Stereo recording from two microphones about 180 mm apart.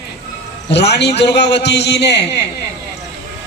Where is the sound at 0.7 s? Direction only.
70° left (ahead or behind).